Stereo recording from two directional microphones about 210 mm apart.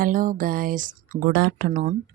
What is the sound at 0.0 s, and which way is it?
A woman's voice, 40° right (ahead or behind).